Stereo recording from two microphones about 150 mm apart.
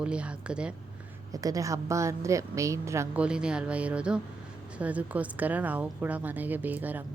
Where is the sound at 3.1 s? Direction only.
5° right (ahead or behind).